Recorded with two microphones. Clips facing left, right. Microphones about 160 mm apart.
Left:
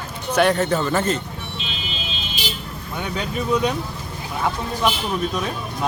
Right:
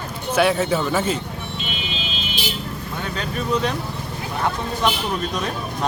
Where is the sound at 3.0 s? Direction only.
15° left (ahead or behind).